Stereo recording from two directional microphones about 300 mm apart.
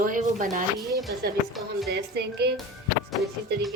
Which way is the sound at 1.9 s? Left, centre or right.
Right.